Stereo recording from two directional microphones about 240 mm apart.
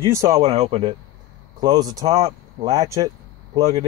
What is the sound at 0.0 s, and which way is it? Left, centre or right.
Speech, centre.